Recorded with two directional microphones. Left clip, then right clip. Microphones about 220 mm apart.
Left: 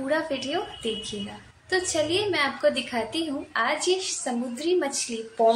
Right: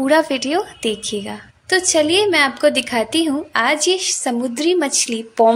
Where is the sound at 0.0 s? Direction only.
45° right (ahead or behind).